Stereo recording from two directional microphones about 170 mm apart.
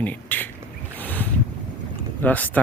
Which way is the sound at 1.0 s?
10° left (ahead or behind).